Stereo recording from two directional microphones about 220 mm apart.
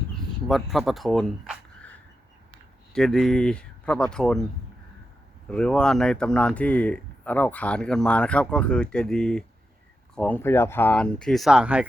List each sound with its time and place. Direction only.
0.1 s a sound: centre (ahead or behind)
2.9 s speech: centre (ahead or behind)
5.5 s speech: 5° left (ahead or behind)